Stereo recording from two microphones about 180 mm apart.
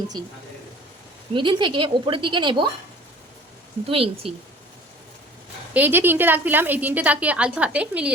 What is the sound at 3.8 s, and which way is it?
Speech, 30° right (ahead or behind).